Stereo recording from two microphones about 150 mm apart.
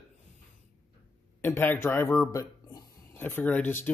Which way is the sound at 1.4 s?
15° left (ahead or behind).